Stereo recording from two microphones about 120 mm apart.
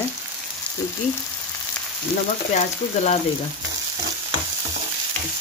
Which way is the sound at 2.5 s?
65° left (ahead or behind).